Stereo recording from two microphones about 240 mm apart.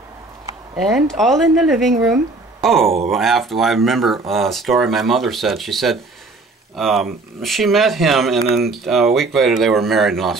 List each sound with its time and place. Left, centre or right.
0.7 s speech: centre